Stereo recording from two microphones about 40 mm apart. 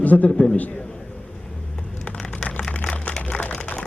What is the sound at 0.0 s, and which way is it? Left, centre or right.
Speech, left.